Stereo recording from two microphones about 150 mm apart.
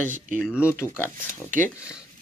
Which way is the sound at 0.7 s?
15° left (ahead or behind).